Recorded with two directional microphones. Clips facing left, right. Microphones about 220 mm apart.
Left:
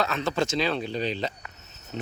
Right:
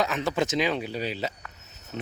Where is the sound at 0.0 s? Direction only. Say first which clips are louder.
Even; 15° right (ahead or behind).